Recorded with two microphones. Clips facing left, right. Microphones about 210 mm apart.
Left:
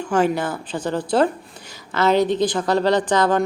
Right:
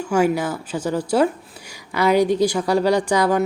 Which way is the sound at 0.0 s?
10° right (ahead or behind).